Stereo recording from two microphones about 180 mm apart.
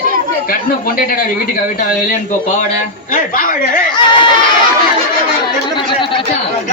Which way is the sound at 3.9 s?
25° left (ahead or behind).